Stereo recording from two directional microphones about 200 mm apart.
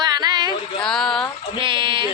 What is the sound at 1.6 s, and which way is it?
Speech, 25° right (ahead or behind).